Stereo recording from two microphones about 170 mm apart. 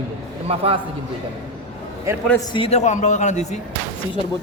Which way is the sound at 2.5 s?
35° left (ahead or behind).